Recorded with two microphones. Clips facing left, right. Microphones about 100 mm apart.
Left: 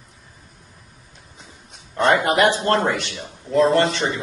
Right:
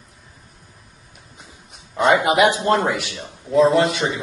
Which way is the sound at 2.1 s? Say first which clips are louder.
Right 1 dB; 15° right (ahead or behind).